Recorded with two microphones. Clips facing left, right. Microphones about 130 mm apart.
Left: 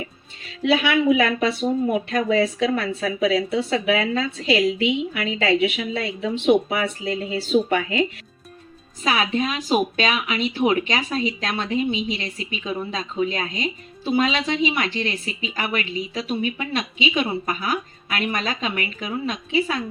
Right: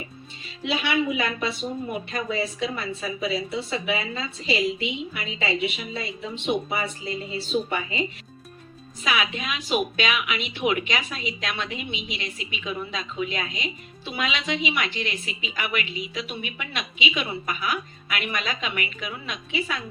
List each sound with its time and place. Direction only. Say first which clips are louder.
1.2 s a woman's voice: left 7 dB; 80° left
9.0 s speech: left 5 dB; 35° left (ahead or behind)